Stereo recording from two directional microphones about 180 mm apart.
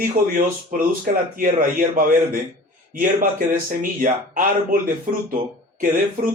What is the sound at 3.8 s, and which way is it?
Speech, 50° right (ahead or behind).